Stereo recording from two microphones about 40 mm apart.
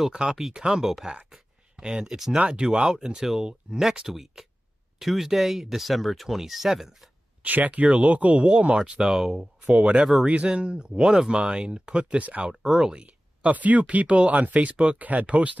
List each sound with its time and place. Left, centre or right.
0.1 s speech: centre
1.8 s speech: centre
2.1 s speech: centre
2.4 s speech: right; by 7.1 s centre
7.4 s speech: right
8.4 s speech: right
9.0 s speech: centre
9.4 s speech: right
12.6 s speech: centre
12.9 s speech: right
15.0 s speech: right